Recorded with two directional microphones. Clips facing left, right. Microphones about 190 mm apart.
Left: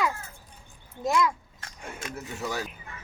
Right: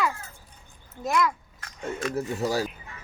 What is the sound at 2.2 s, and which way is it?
Speech, 35° right (ahead or behind).